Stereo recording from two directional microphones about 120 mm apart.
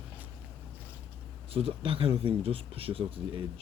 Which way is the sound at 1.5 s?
50° right (ahead or behind).